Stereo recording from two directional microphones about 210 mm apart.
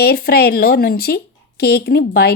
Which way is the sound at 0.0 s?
45° left (ahead or behind).